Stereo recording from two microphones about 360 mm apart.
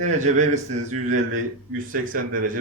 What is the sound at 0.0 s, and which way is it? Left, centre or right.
Speech, centre.